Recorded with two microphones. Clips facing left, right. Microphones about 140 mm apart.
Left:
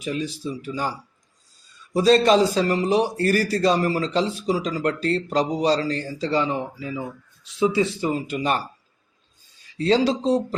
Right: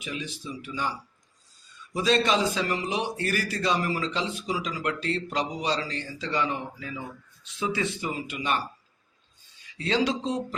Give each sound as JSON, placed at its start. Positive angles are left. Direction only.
{"t": 0.0, "sound": "speech", "side_deg": 40}
{"t": 8.1, "sound": "speech", "side_deg": 40}
{"t": 9.7, "sound": "speech", "side_deg": 35}